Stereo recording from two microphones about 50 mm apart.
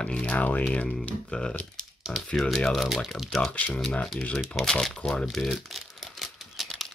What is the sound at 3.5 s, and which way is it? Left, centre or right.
Speech, left.